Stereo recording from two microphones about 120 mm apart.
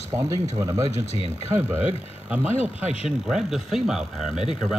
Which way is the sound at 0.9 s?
60° left (ahead or behind).